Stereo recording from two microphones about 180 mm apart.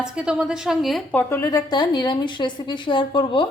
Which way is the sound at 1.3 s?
15° left (ahead or behind).